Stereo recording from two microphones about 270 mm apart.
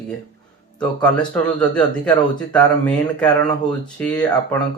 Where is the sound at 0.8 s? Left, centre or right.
Centre.